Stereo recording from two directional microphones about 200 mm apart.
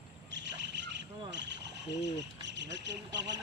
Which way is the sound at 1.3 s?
60° right (ahead or behind).